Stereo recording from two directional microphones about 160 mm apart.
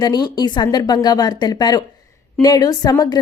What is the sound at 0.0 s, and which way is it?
A woman's voice, 25° left (ahead or behind).